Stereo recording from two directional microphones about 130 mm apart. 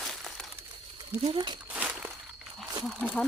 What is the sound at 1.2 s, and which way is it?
Speech, 40° right (ahead or behind).